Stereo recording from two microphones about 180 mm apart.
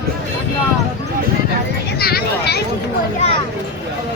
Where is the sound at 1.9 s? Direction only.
60° left (ahead or behind).